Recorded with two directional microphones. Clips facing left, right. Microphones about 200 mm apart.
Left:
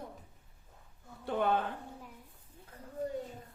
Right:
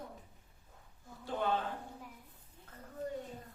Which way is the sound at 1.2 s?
60° left (ahead or behind).